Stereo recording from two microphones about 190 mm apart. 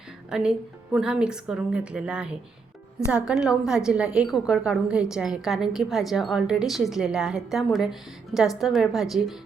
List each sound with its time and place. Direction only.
0.3 s a woman's voice: 5° right (ahead or behind)